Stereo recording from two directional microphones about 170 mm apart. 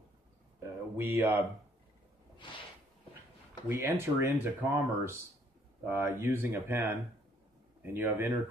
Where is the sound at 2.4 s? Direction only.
30° left (ahead or behind).